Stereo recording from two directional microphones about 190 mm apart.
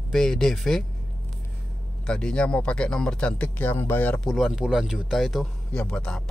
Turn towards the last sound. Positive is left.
turn(degrees=5)  # may be behind; listen again after turning